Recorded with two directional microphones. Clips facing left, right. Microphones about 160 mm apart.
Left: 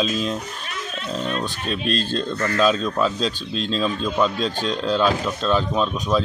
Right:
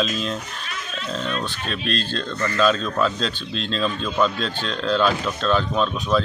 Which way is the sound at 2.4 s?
5° left (ahead or behind).